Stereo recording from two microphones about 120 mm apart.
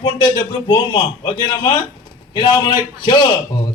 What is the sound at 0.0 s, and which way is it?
A man's voice, 35° left (ahead or behind).